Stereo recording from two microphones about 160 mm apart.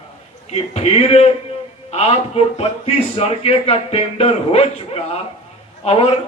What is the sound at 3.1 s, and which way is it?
Speech, 40° left (ahead or behind).